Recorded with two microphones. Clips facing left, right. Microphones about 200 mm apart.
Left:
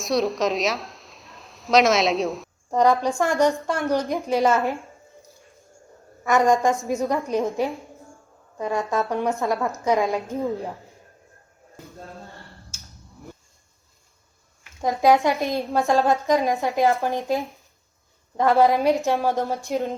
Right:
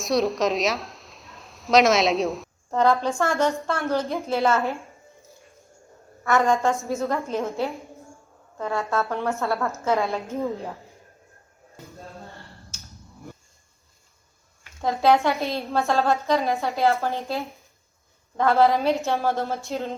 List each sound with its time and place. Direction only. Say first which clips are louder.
0.0 s a woman's voice: even; centre (ahead or behind)
2.6 s a woman's voice: left 2 dB; 15° left (ahead or behind)
6.2 s a woman's voice: left 2 dB; 15° left (ahead or behind)
14.8 s a woman's voice: left 1 dB; 15° left (ahead or behind)